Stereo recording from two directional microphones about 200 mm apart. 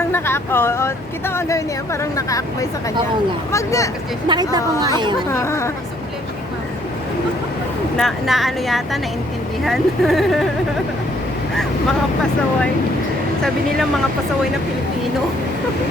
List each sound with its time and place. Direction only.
0.0 s speech: 10° left (ahead or behind)
4.3 s speech: 20° right (ahead or behind)
5.3 s speech: 15° left (ahead or behind)
7.9 s a woman's voice: centre (ahead or behind)